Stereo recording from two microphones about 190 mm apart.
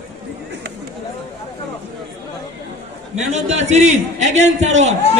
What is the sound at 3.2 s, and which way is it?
A man's voice, 35° right (ahead or behind).